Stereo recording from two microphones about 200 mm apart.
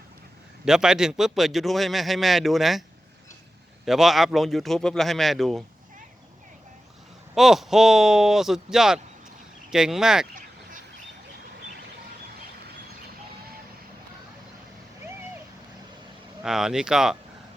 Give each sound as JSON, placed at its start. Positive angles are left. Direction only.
{"t": 0.6, "sound": "a man's voice", "side_deg": -5}
{"t": 3.8, "sound": "a man's voice", "side_deg": 0}
{"t": 7.3, "sound": "a man's voice", "side_deg": 0}
{"t": 10.3, "sound": "duck", "side_deg": -40}
{"t": 16.4, "sound": "a man's voice", "side_deg": -5}